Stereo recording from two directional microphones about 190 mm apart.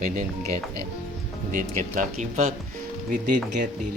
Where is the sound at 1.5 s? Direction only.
45° right (ahead or behind).